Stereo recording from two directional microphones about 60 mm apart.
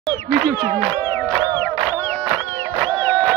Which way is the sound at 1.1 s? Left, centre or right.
Left.